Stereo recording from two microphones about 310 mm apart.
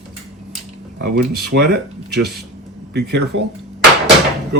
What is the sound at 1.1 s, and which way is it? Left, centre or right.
Speech, right.